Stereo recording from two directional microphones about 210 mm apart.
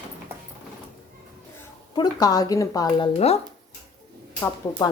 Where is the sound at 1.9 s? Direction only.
20° left (ahead or behind).